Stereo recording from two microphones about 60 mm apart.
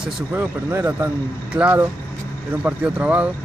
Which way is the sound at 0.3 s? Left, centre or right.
Right.